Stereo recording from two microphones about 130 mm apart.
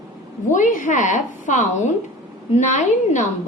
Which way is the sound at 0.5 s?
80° left.